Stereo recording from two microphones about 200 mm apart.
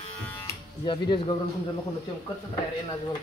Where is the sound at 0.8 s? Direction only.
25° left (ahead or behind).